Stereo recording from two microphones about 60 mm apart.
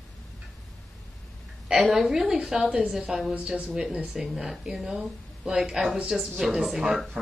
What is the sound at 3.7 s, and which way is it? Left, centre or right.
A woman's voice, centre.